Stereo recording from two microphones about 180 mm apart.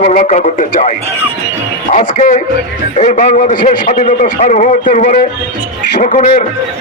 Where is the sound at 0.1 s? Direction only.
45° left (ahead or behind).